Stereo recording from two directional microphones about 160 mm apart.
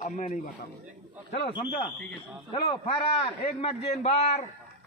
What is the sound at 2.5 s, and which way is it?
Speech, 30° left (ahead or behind).